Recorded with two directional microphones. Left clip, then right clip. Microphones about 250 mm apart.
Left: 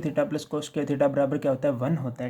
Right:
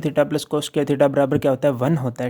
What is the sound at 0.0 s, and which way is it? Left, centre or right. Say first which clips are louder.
Speech: right 7 dB; right.